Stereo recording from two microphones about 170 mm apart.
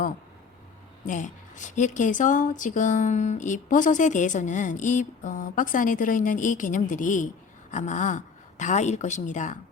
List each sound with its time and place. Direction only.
1.0 s a woman's voice: 50° left (ahead or behind)